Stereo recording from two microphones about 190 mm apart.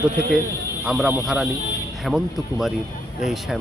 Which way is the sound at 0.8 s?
5° right (ahead or behind).